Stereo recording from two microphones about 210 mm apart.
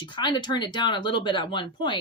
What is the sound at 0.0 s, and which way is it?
Speech, 20° left (ahead or behind).